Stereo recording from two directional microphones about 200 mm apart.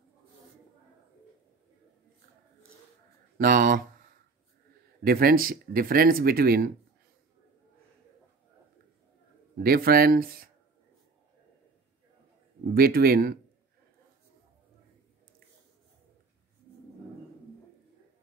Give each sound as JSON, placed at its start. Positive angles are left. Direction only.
{"t": 3.3, "sound": "speech", "side_deg": -45}
{"t": 5.0, "sound": "speech", "side_deg": -45}
{"t": 9.6, "sound": "speech", "side_deg": -50}
{"t": 12.7, "sound": "speech", "side_deg": -50}